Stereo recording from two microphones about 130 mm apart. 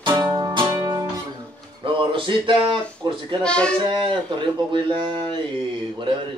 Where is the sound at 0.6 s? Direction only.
30° right (ahead or behind).